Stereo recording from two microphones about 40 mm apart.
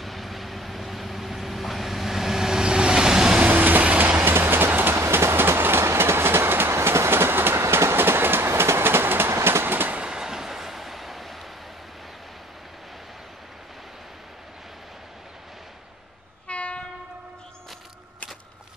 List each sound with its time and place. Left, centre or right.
0.0 s vehicle: centre
3.4 s train: right
4.2 s train: right
10.0 s train: centre
16.4 s train: left